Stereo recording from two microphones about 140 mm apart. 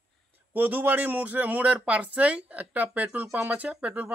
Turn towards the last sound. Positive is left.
turn(degrees=-10)  # may be behind; listen again after turning